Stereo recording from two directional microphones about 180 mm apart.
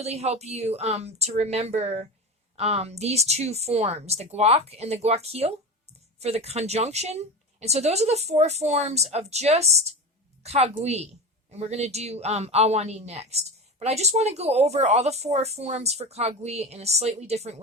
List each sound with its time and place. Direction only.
0.0 s speech: 35° right (ahead or behind)